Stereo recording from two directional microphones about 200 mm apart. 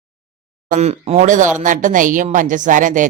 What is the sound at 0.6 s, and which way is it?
Speech, 35° right (ahead or behind).